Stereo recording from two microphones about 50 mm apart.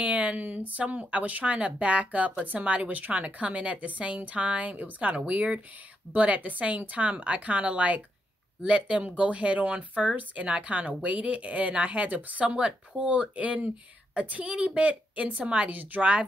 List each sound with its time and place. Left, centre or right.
0.0 s speech: right